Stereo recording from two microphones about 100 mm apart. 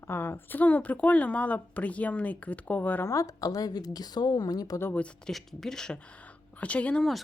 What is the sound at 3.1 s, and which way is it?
A woman's voice, 35° left (ahead or behind).